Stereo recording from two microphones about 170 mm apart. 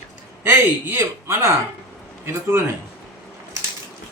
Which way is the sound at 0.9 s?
15° right (ahead or behind).